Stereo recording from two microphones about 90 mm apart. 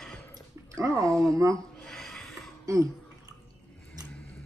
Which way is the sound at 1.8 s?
5° left (ahead or behind).